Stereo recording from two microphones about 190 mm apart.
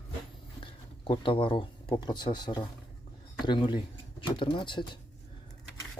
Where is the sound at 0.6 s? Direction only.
25° left (ahead or behind).